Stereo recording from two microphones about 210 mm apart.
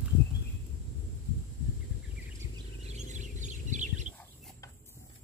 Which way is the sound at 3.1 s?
35° right (ahead or behind).